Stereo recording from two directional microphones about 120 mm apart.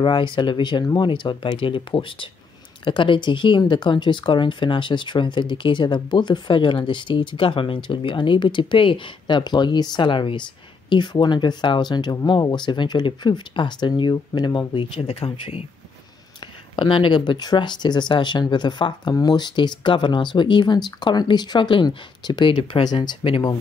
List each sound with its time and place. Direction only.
0.0 s speech: 40° left (ahead or behind)
22.6 s speech: 50° left (ahead or behind)
22.8 s speech: 40° left (ahead or behind)